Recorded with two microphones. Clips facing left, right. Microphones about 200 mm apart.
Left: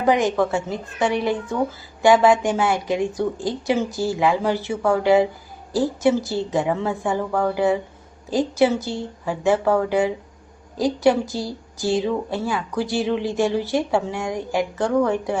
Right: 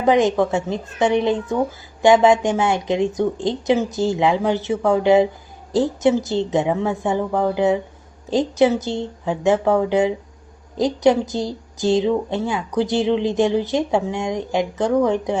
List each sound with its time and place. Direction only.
0.0 s speech: 20° right (ahead or behind)
10.8 s speech: 20° right (ahead or behind)